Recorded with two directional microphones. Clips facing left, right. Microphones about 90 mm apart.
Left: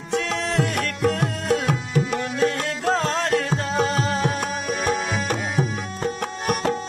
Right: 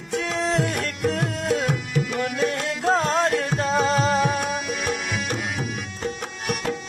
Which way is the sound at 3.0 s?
25° right (ahead or behind).